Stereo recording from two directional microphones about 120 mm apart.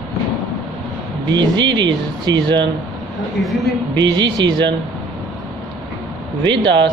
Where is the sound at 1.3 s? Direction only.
40° right (ahead or behind).